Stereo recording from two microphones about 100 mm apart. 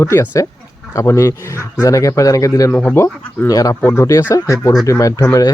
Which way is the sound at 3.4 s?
35° left (ahead or behind).